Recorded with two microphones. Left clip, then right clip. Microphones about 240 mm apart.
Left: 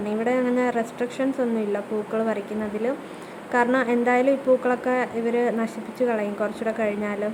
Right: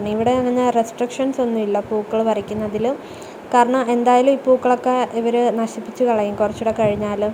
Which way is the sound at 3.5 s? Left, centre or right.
Centre.